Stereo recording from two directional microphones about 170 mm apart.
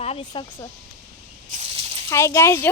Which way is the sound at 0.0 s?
35° left (ahead or behind).